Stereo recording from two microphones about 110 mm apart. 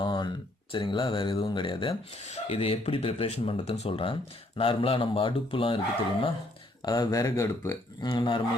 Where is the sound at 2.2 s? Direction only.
75° left (ahead or behind); by 5.8 s 55° left (ahead or behind).